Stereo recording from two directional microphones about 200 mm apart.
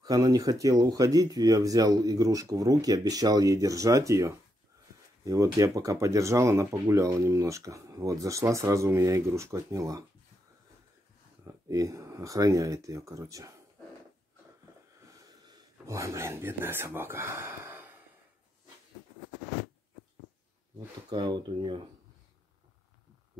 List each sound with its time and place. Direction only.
0.0 s speech: 20° right (ahead or behind)
11.4 s speech: 15° right (ahead or behind)
15.0 s a sound: 15° right (ahead or behind)
21.1 s speech: 20° right (ahead or behind)